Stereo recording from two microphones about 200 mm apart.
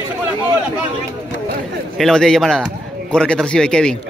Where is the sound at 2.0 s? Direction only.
5° left (ahead or behind).